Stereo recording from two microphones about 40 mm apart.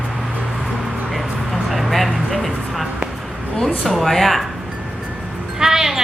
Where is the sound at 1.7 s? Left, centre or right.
Centre.